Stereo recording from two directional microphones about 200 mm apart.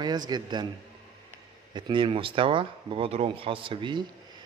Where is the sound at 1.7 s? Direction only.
25° right (ahead or behind).